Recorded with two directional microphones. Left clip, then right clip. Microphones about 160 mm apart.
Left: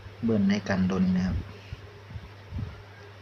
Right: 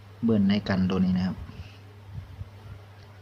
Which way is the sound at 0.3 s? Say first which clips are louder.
Right 1 dB; 20° right (ahead or behind).